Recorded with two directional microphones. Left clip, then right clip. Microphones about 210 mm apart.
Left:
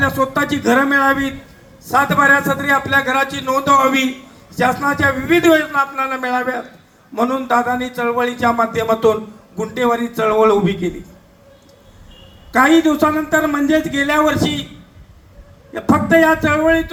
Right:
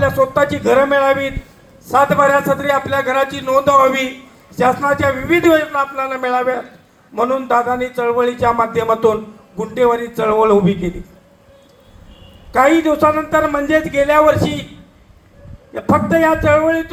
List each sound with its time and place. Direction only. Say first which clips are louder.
0.0 s a man's voice: right 3 dB; 40° left (ahead or behind)
12.5 s a man's voice: even; 40° left (ahead or behind)
15.7 s a man's voice: left 1 dB; 40° left (ahead or behind)